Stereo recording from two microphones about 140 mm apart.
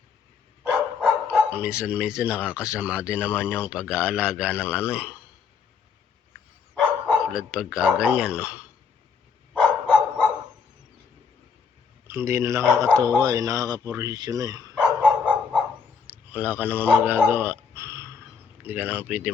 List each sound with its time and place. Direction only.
0.6 s dog: 10° right (ahead or behind)
1.8 s a man's voice: 10° right (ahead or behind)
6.7 s speech: 5° right (ahead or behind)
12.0 s speech: 20° right (ahead or behind)
14.8 s dog: 10° right (ahead or behind)
16.0 s a man's voice: 10° right (ahead or behind)